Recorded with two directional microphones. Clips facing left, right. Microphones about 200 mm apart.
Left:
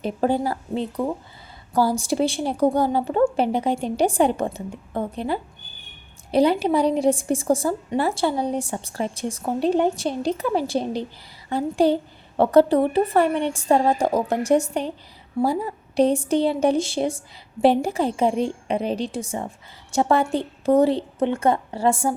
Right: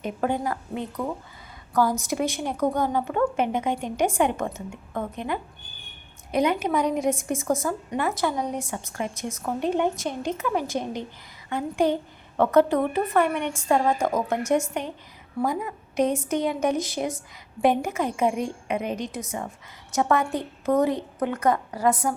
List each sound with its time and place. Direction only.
0.0 s a woman's voice: 30° left (ahead or behind)